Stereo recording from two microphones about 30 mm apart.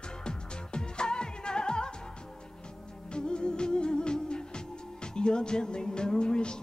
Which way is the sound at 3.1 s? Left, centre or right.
Left.